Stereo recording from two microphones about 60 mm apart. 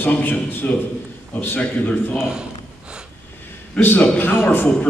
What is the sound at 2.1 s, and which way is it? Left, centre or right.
Speech, centre.